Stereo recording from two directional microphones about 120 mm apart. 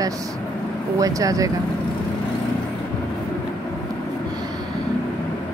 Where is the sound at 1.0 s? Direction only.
30° right (ahead or behind).